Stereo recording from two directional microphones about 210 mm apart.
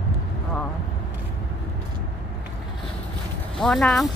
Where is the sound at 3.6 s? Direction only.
Centre (ahead or behind).